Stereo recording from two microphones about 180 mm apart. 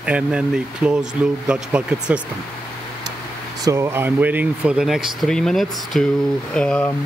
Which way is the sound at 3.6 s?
15° right (ahead or behind).